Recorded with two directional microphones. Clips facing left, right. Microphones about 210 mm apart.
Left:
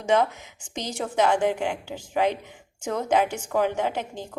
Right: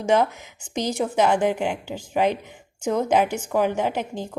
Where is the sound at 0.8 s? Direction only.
10° right (ahead or behind).